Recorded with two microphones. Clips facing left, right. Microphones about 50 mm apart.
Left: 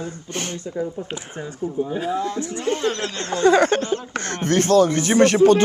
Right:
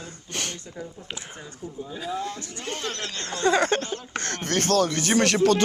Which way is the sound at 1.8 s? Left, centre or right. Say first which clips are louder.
Left 7 dB; left.